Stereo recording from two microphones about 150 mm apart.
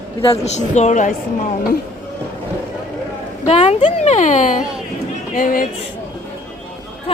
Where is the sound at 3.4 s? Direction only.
45° left (ahead or behind).